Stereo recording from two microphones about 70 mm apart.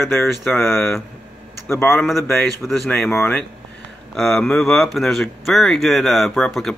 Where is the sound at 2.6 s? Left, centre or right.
Centre.